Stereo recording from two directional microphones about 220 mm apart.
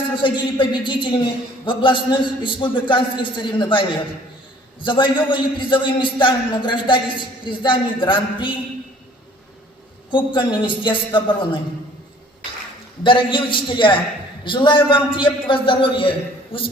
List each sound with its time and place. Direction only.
0.2 s a man's voice: 20° left (ahead or behind)
10.1 s a man's voice: 20° left (ahead or behind)
13.0 s a man's voice: 20° left (ahead or behind)